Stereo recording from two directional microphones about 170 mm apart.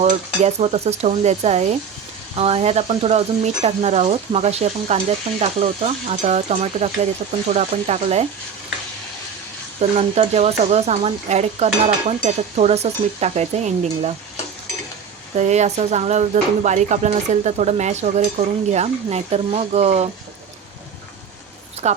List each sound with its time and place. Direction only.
0.0 s speech: 40° right (ahead or behind)
9.9 s speech: 40° right (ahead or behind)
15.4 s speech: 40° right (ahead or behind)
21.8 s speech: 40° right (ahead or behind)